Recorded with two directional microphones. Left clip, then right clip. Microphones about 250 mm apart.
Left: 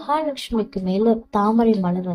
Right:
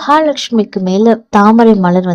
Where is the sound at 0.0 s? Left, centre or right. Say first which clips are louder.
Right 12 dB; right.